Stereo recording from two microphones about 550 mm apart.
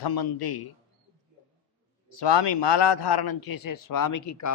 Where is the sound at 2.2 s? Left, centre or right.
Left.